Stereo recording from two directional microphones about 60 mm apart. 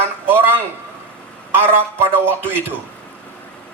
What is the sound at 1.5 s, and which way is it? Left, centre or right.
Speech, right.